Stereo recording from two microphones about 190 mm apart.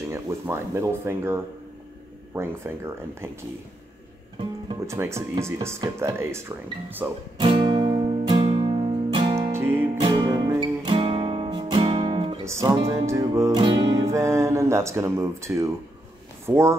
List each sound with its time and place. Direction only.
0.1 s speech: 15° right (ahead or behind)
4.4 s music: 25° right (ahead or behind)
4.9 s speech: 15° right (ahead or behind)
7.3 s music: 25° right (ahead or behind)
9.5 s music: 10° right (ahead or behind); by 12.4 s 30° right (ahead or behind)
12.4 s speech: 15° right (ahead or behind)
14.0 s speech: 15° right (ahead or behind)